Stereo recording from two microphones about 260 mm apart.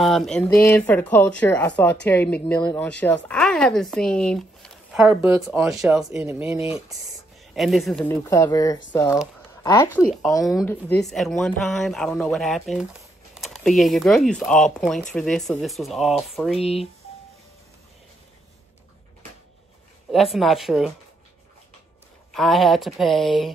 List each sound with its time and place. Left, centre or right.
0.0 s speech: centre
16.6 s speech: left
20.1 s speech: centre
22.3 s speech: centre